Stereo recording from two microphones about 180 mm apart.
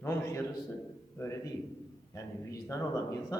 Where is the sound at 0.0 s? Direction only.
15° left (ahead or behind).